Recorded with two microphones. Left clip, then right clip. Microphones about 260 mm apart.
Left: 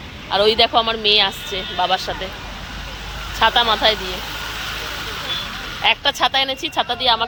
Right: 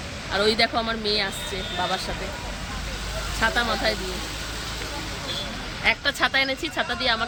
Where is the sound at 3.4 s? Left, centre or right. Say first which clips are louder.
Left 8 dB; centre.